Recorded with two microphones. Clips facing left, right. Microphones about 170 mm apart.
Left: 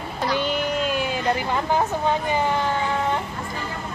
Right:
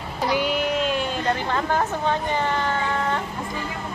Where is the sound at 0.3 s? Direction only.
5° right (ahead or behind); by 3.2 s 15° left (ahead or behind).